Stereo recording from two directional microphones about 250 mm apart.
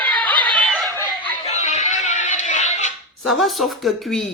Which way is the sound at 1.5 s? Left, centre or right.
Left.